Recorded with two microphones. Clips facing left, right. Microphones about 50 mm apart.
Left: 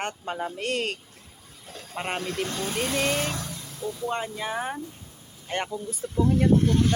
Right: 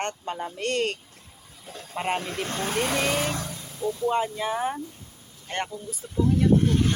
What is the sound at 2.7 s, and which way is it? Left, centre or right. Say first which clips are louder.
Speech: right 4 dB; right.